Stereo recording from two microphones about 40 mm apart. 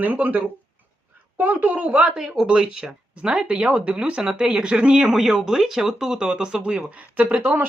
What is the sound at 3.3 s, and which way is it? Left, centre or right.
Speech, right.